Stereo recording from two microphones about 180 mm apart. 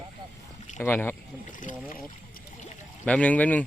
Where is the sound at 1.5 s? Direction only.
45° left (ahead or behind).